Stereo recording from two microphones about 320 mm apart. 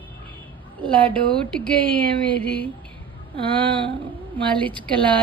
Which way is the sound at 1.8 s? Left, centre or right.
Centre.